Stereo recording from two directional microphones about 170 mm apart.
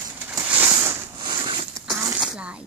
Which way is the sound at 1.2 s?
25° right (ahead or behind).